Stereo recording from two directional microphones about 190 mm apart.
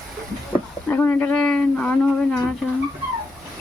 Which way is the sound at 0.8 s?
10° left (ahead or behind).